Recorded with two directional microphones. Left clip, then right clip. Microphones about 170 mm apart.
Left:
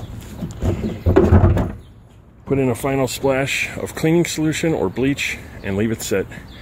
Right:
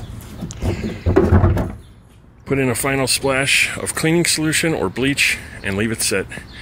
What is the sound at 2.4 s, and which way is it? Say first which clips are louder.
Speech: even; 5° left (ahead or behind).